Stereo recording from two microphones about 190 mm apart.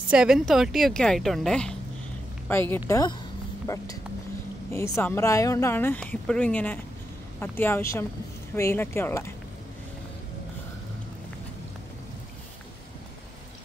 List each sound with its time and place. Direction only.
0.1 s a woman's voice: 5° right (ahead or behind); by 9.3 s 15° left (ahead or behind)